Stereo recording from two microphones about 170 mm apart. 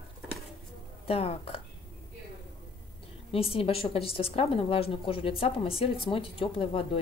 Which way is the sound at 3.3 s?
35° left (ahead or behind).